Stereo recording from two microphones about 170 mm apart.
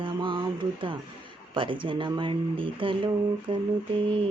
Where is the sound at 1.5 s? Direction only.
30° right (ahead or behind).